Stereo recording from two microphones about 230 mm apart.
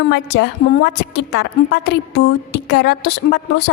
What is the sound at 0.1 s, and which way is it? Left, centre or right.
A woman's voice, left.